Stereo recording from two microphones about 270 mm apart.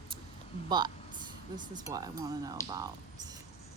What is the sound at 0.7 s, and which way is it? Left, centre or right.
Speech, centre.